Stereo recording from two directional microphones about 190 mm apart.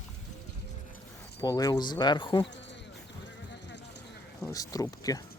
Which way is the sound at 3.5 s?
65° left (ahead or behind).